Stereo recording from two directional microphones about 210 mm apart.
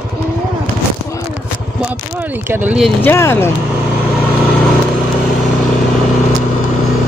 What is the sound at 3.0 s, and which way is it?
Speech, 10° left (ahead or behind).